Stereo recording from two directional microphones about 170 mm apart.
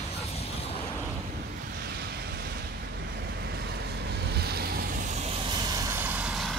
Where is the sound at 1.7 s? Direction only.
70° right (ahead or behind).